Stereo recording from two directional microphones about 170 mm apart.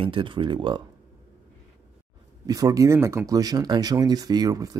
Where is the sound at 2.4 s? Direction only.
20° right (ahead or behind).